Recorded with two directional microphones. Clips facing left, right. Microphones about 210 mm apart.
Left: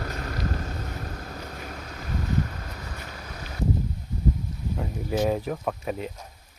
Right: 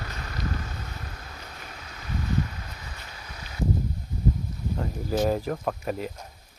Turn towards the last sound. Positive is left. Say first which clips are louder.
# even
turn(degrees=0)  # may be behind; listen again after turning